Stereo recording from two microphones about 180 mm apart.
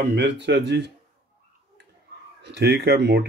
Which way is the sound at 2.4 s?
70° right (ahead or behind).